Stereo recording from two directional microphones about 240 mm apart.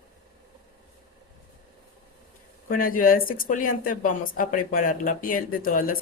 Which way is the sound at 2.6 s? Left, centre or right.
Left.